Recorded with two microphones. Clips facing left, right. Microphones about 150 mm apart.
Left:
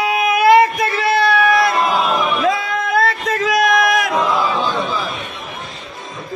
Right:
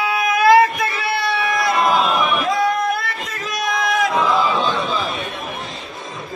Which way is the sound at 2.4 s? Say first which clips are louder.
Even; 90° left.